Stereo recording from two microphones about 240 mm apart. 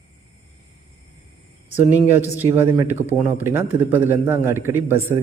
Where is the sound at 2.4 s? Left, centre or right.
Centre.